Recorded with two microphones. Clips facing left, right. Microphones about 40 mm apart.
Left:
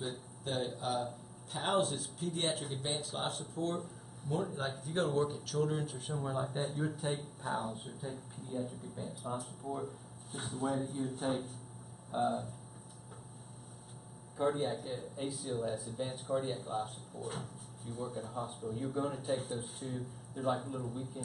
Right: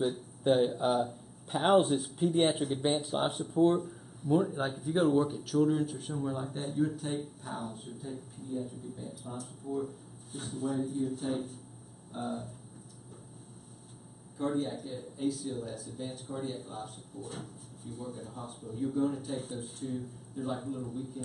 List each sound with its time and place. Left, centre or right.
0.4 s a man's voice: right; by 12.4 s centre
14.4 s a man's voice: centre